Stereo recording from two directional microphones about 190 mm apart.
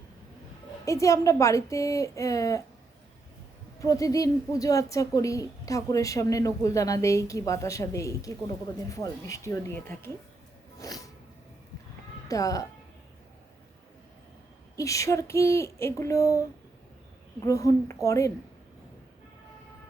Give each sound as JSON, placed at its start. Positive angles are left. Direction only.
{"t": 0.9, "sound": "a woman's voice", "side_deg": 15}
{"t": 3.8, "sound": "a woman's voice", "side_deg": 15}
{"t": 10.8, "sound": "music", "side_deg": 20}
{"t": 12.3, "sound": "a woman's voice", "side_deg": 20}
{"t": 14.8, "sound": "a woman's voice", "side_deg": 15}
{"t": 17.4, "sound": "a woman's voice", "side_deg": 15}